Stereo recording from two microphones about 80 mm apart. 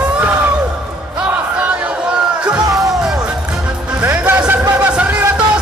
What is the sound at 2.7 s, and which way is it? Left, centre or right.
Music, centre.